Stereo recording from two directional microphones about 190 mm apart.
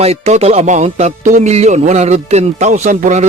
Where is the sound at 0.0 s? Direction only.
35° right (ahead or behind).